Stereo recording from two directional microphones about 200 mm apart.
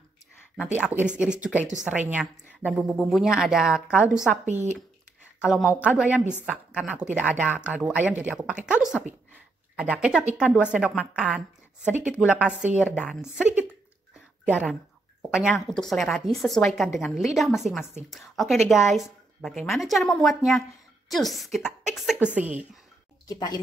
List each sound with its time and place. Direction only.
0.7 s a woman's voice: 5° right (ahead or behind)
4.5 s speech: 35° right (ahead or behind)
5.4 s a woman's voice: 5° right (ahead or behind)
15.3 s a woman's voice: centre (ahead or behind)
23.2 s speech: 20° left (ahead or behind)